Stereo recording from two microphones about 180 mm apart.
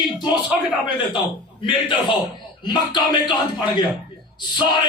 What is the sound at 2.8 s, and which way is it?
Speech, 25° left (ahead or behind).